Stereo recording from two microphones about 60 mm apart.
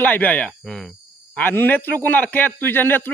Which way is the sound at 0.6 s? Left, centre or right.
Centre.